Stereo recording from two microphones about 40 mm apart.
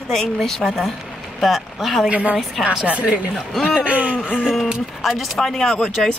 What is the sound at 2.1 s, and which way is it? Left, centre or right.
Speech, right.